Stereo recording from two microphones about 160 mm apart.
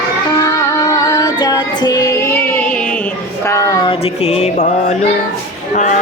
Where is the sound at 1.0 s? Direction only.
25° left (ahead or behind).